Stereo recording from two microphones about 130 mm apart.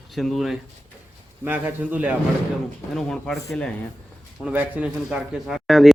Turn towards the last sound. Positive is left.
turn(degrees=0)  # may be behind; listen again after turning